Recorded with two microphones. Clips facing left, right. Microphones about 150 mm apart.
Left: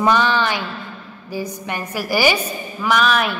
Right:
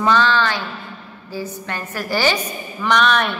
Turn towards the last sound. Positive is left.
turn(degrees=5)  # may be behind; listen again after turning